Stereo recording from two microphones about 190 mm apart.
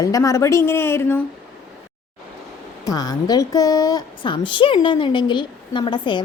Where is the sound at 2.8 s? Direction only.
20° left (ahead or behind).